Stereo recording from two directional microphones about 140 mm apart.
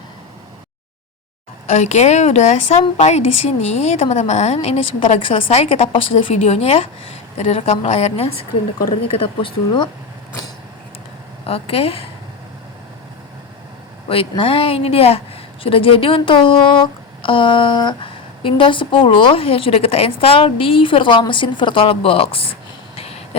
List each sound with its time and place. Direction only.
1.7 s a woman's voice: 60° left (ahead or behind); by 9.9 s 35° left (ahead or behind)
11.4 s a woman's voice: 45° left (ahead or behind)
14.1 s a woman's voice: 40° left (ahead or behind)
23.0 s a sound: 45° left (ahead or behind)